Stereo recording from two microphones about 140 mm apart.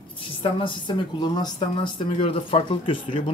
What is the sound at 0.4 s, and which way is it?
A woman's voice, 40° left (ahead or behind).